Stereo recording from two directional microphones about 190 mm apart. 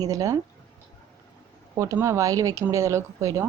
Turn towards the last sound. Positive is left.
turn(degrees=-15)  # may be behind; listen again after turning